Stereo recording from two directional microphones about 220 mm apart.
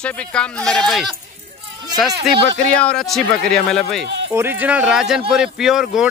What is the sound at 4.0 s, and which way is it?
Speech, 55° right (ahead or behind).